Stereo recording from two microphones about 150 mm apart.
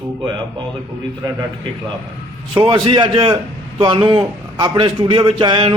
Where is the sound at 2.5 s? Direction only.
35° right (ahead or behind).